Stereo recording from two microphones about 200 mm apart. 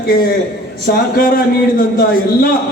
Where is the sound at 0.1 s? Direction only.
45° left (ahead or behind).